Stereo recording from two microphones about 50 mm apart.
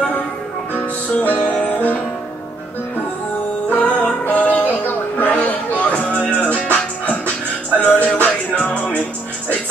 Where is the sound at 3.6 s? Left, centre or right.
Left.